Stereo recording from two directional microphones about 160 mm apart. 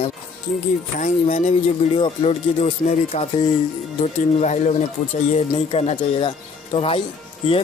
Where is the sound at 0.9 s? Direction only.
50° left (ahead or behind).